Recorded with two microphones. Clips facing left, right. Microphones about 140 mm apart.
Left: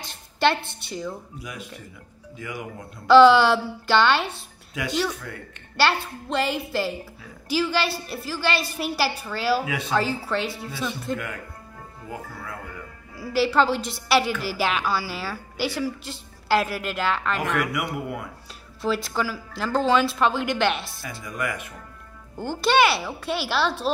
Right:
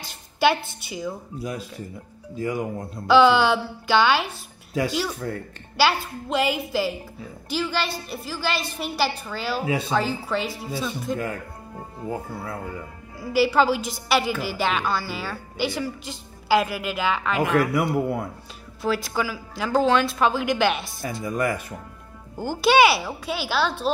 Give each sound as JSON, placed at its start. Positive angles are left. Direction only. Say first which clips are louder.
{"t": 0.1, "sound": "a woman's voice", "louder": "right 1 dB", "side_deg": -5}
{"t": 2.3, "sound": "speech", "louder": "right 8 dB", "side_deg": -35}
{"t": 3.1, "sound": "a woman's voice", "louder": "left 3 dB", "side_deg": 0}
{"t": 5.3, "sound": "speech", "louder": "right 7 dB", "side_deg": -35}
{"t": 5.8, "sound": "a woman's voice", "louder": "right 1 dB", "side_deg": 0}
{"t": 11.1, "sound": "speech", "louder": "right 4 dB", "side_deg": -30}
{"t": 13.2, "sound": "a woman's voice", "louder": "right 1 dB", "side_deg": 0}
{"t": 17.9, "sound": "speech", "louder": "right 7 dB", "side_deg": -35}
{"t": 18.8, "sound": "a woman's voice", "louder": "right 1 dB", "side_deg": 0}
{"t": 21.0, "sound": "speech", "louder": "right 6 dB", "side_deg": -35}
{"t": 22.4, "sound": "a woman's voice", "louder": "right 3 dB", "side_deg": -5}